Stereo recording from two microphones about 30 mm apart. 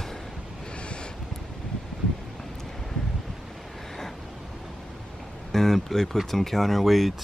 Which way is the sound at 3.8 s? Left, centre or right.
Centre.